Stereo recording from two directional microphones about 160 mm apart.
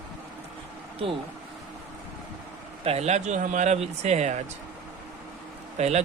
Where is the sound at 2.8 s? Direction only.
40° right (ahead or behind).